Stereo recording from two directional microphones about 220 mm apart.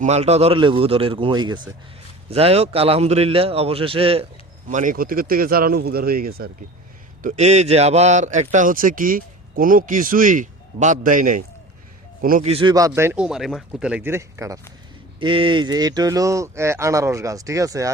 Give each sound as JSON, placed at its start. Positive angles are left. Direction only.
{"t": 0.0, "sound": "a man's voice", "side_deg": -30}
{"t": 4.7, "sound": "a man's voice", "side_deg": -35}